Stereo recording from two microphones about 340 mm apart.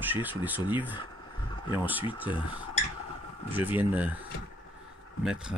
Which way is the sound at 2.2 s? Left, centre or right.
Centre.